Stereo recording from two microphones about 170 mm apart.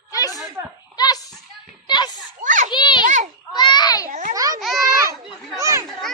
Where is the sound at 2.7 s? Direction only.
25° left (ahead or behind).